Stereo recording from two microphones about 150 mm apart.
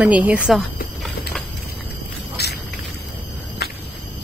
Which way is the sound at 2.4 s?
90° left.